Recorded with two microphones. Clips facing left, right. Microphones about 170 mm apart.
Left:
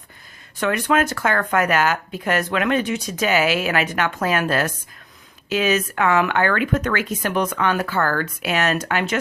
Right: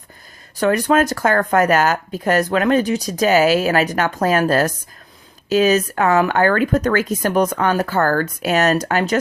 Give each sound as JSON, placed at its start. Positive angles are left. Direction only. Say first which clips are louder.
{"t": 0.5, "sound": "speech", "louder": "right 4 dB", "side_deg": -35}